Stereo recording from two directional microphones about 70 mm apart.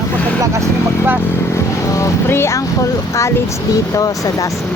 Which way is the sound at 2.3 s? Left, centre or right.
Left.